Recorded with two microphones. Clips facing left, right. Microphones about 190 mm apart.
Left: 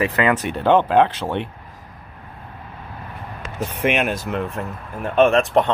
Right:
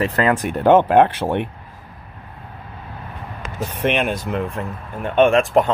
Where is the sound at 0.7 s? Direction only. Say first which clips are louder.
Right 1 dB; 50° right (ahead or behind).